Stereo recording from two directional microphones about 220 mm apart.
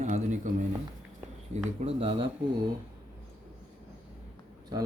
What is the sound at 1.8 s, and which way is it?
Speech, 25° right (ahead or behind).